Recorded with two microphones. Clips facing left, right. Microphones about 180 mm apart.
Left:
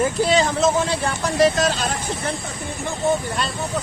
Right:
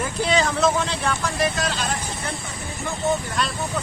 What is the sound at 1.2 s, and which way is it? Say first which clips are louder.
Speech: left 6 dB; 40° left (ahead or behind).